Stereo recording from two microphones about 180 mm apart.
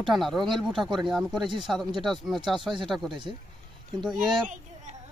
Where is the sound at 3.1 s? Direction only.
25° right (ahead or behind).